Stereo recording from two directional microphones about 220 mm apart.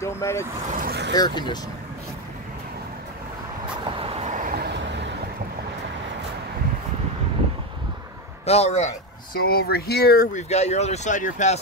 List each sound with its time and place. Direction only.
0.0 s speech: 10° left (ahead or behind)
0.7 s speech: 40° right (ahead or behind)
1.1 s speech: 20° left (ahead or behind)
3.9 s vehicle: 25° right (ahead or behind); by 5.0 s 50° right (ahead or behind)
8.5 s speech: 30° left (ahead or behind)
9.4 s speech: 45° left (ahead or behind)
10.5 s speech: 30° left (ahead or behind)